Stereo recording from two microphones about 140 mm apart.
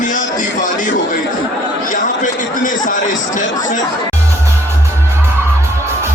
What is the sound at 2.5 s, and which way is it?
Speech, 70° left (ahead or behind).